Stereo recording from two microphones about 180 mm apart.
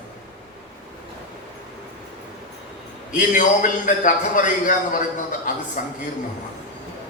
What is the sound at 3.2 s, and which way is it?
A man's voice, 45° left (ahead or behind).